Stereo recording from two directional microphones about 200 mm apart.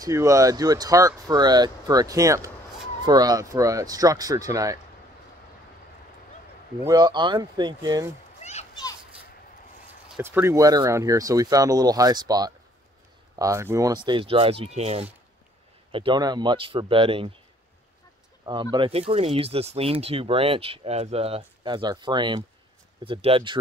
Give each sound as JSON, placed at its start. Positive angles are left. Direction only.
{"t": 0.0, "sound": "speech", "side_deg": -15}
{"t": 6.8, "sound": "speech", "side_deg": -20}
{"t": 8.4, "sound": "children playing", "side_deg": 35}
{"t": 10.1, "sound": "speech", "side_deg": -10}
{"t": 18.4, "sound": "speech", "side_deg": -20}